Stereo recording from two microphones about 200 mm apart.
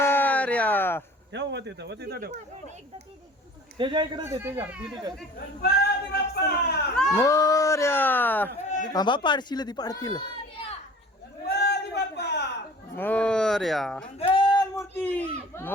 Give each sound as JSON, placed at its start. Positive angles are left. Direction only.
{"t": 0.0, "sound": "a sound", "side_deg": 10}
{"t": 1.3, "sound": "speech", "side_deg": -60}
{"t": 3.8, "sound": "a man's voice", "side_deg": -25}
{"t": 4.2, "sound": "speech", "side_deg": -10}
{"t": 5.6, "sound": "speech", "side_deg": 50}
{"t": 7.1, "sound": "speech", "side_deg": 15}
{"t": 8.9, "sound": "speech", "side_deg": 20}
{"t": 11.4, "sound": "a sound", "side_deg": 55}
{"t": 13.0, "sound": "speech", "side_deg": 5}
{"t": 14.2, "sound": "a man's voice", "side_deg": 25}